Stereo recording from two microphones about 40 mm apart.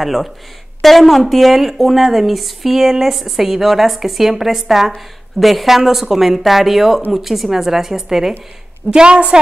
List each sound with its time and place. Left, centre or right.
0.0 s a woman's voice: centre
8.9 s a woman's voice: right